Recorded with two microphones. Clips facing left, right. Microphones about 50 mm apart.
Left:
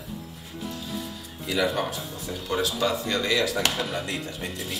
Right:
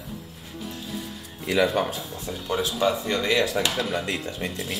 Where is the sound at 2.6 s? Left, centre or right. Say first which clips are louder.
Right 3 dB; right.